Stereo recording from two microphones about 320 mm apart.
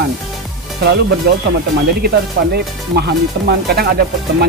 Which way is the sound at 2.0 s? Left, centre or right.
Right.